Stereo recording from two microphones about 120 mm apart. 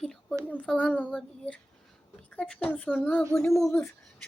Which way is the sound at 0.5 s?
10° left (ahead or behind).